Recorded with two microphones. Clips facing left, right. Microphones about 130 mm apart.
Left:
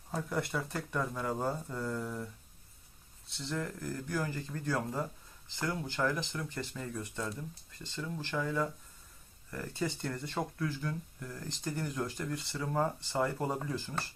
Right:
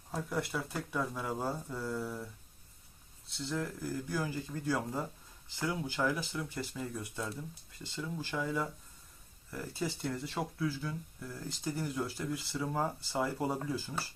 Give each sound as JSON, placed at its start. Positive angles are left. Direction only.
{"t": 0.1, "sound": "speech", "side_deg": 0}